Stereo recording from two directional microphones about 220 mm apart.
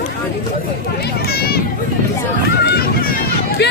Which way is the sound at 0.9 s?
45° left (ahead or behind).